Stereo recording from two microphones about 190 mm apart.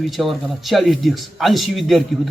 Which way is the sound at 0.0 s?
Centre (ahead or behind).